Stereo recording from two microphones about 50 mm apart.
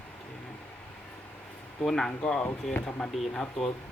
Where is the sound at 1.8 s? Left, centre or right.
Centre.